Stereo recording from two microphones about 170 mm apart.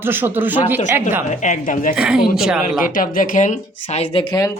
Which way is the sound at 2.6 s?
55° left (ahead or behind).